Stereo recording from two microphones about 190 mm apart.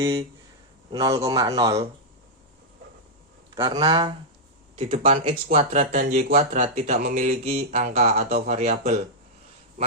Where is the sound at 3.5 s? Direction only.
25° right (ahead or behind).